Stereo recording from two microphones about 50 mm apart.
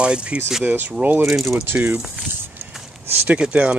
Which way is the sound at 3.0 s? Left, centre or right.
Right.